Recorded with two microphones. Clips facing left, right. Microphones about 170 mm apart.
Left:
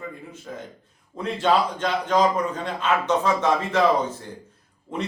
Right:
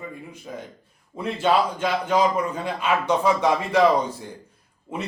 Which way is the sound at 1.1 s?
10° right (ahead or behind).